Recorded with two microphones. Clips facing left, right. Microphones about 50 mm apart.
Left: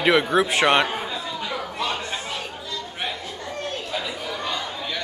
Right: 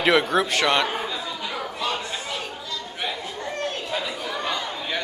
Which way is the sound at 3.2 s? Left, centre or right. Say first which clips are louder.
Right 2 dB; right.